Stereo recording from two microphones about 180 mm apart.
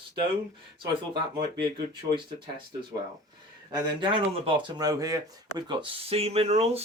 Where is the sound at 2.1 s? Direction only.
25° right (ahead or behind).